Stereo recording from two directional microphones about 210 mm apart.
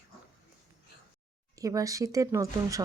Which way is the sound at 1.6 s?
15° right (ahead or behind).